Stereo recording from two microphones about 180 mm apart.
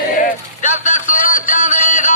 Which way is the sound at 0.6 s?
45° left (ahead or behind).